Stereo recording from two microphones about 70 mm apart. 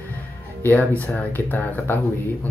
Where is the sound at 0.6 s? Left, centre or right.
Left.